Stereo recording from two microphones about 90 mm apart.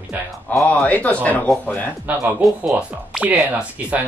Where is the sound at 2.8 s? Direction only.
10° right (ahead or behind).